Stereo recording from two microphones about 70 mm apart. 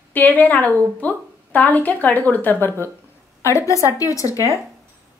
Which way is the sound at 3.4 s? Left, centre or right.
Left.